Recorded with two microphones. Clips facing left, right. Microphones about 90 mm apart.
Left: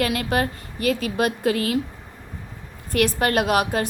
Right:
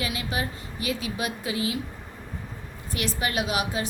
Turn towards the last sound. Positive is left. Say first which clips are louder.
# left 7 dB
turn(degrees=55)  # may be behind; listen again after turning